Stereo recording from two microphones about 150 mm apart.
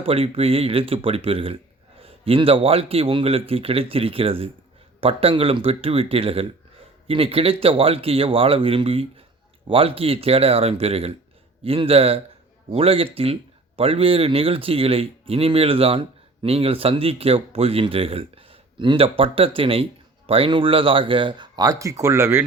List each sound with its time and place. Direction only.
0.0 s speech: 40° right (ahead or behind); by 22.4 s 15° right (ahead or behind)